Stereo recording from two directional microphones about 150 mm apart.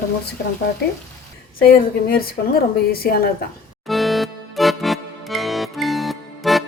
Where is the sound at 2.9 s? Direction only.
90° left.